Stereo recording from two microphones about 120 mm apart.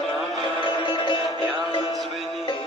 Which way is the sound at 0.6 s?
40° left (ahead or behind).